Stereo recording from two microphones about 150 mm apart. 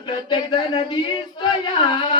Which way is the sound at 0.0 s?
30° left (ahead or behind).